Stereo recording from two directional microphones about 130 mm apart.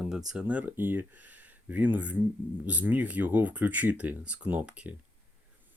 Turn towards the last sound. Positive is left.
turn(degrees=-10)  # may be behind; listen again after turning